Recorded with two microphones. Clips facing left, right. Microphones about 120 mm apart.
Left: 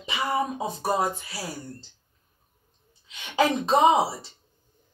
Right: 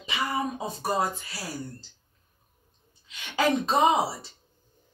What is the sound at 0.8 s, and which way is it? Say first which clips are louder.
Speech: left 2 dB; 20° left (ahead or behind).